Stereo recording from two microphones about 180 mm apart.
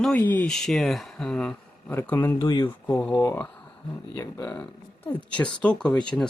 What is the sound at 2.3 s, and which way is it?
Speech, 25° left (ahead or behind).